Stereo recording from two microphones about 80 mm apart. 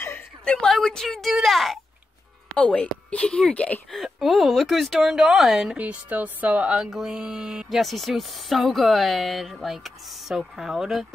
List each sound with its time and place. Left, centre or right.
0.5 s speech: centre
2.5 s speech: centre
3.9 s speech: centre
5.8 s a woman's voice: centre
6.8 s speech: centre